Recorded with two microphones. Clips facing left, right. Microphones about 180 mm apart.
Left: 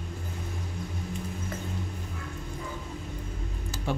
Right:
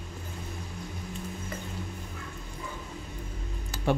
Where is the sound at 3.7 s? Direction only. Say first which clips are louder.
Right 5 dB; 60° right (ahead or behind).